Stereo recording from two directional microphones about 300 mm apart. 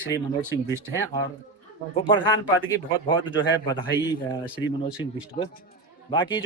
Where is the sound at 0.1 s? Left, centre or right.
Centre.